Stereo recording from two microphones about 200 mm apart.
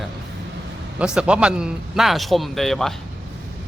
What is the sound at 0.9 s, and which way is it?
A man's voice, 5° right (ahead or behind).